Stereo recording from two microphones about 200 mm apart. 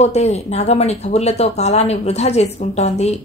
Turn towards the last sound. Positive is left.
turn(degrees=35)  # may be behind; listen again after turning